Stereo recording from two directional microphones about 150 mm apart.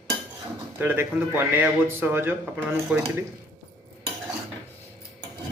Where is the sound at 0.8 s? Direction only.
15° right (ahead or behind).